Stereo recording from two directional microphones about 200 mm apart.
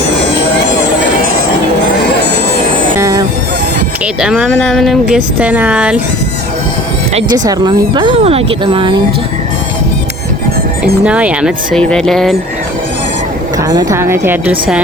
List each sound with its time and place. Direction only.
3.0 s fowl: 15° right (ahead or behind)
4.0 s speech: 5° right (ahead or behind)
7.1 s speech: 30° right (ahead or behind)
7.3 s speech: 20° right (ahead or behind)
11.0 s speech: 5° right (ahead or behind)
13.6 s speech: 15° right (ahead or behind)